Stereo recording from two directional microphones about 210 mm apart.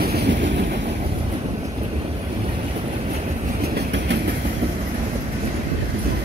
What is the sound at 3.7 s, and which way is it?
Train, 55° right (ahead or behind).